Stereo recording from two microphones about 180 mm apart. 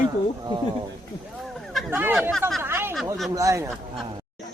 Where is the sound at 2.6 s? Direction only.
15° right (ahead or behind).